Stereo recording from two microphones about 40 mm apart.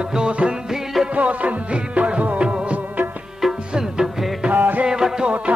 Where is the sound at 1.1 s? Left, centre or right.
Right.